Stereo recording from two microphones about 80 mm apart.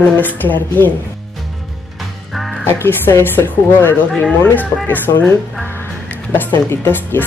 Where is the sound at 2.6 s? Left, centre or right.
Left.